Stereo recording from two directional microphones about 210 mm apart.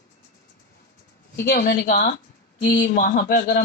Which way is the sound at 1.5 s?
50° left (ahead or behind).